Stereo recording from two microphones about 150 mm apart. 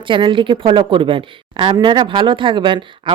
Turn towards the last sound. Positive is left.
turn(degrees=-35)  # may be behind; listen again after turning